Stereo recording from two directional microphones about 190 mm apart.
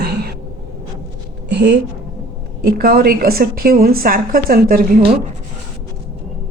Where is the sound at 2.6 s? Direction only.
50° right (ahead or behind).